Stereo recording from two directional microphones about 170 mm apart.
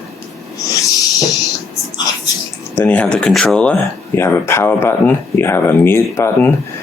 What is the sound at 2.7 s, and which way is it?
Speech, 10° left (ahead or behind).